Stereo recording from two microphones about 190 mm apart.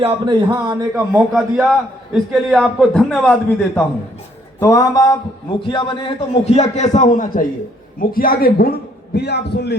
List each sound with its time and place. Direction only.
0.0 s a man's voice: 25° right (ahead or behind)
0.9 s a man's voice: 5° right (ahead or behind)
4.6 s a sound: 20° left (ahead or behind)
5.5 s a man's voice: 25° left (ahead or behind); by 9.7 s 60° left (ahead or behind)